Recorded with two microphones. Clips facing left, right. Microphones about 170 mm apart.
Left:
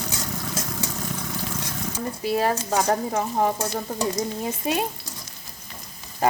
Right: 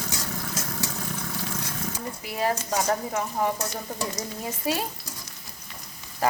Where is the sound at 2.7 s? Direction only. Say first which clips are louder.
Left 3 dB; 35° left (ahead or behind).